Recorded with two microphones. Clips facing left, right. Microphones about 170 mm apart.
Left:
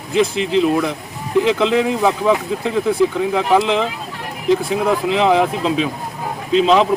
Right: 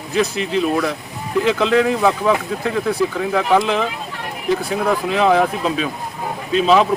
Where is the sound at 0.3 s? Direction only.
20° left (ahead or behind).